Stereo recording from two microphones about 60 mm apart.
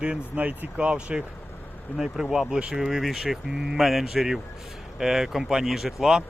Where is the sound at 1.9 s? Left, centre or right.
Centre.